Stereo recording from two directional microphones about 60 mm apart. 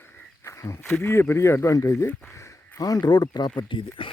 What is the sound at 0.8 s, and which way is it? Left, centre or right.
Speech, left.